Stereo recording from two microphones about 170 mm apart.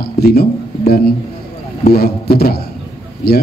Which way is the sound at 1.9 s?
65° left (ahead or behind).